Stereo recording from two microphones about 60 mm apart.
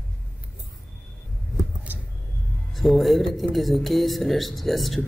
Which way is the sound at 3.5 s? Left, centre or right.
Centre.